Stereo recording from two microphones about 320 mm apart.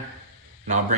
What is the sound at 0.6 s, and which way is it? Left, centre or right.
Speech, right.